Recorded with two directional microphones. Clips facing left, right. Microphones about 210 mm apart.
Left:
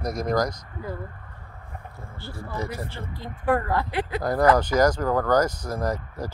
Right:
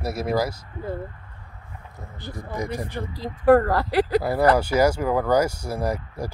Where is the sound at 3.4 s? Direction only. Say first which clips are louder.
Right 7 dB; 40° right (ahead or behind).